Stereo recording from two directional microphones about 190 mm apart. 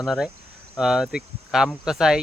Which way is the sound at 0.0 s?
Centre (ahead or behind).